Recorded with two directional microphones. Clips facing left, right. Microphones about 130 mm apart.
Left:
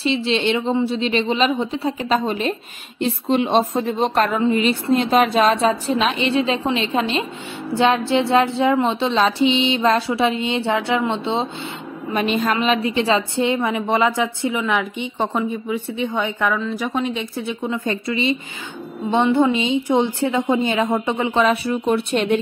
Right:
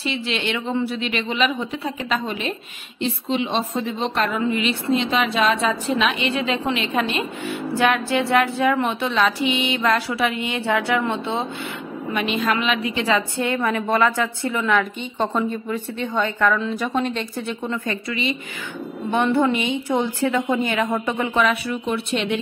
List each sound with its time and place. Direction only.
0.0 s a woman's voice: 30° left (ahead or behind)
3.0 s a woman's voice: 45° left (ahead or behind); by 7.2 s 25° left (ahead or behind)
7.7 s a sound: 25° left (ahead or behind)
12.1 s a woman's voice: 40° left (ahead or behind); by 16.5 s 15° left (ahead or behind)
16.5 s speech: 5° left (ahead or behind)
17.8 s a sound: 30° left (ahead or behind)